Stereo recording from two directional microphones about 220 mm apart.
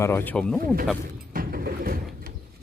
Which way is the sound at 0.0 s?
10° left (ahead or behind).